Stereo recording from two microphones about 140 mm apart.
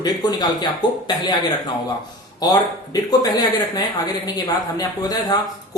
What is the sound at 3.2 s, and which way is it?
Speech, 30° left (ahead or behind).